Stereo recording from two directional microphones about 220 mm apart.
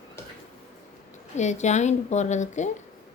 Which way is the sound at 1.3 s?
30° left (ahead or behind).